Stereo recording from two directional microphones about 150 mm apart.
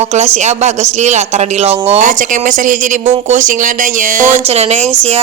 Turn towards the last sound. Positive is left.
turn(degrees=-45)  # may be behind; listen again after turning